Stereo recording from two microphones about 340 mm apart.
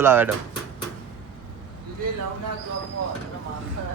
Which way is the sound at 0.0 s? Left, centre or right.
Centre.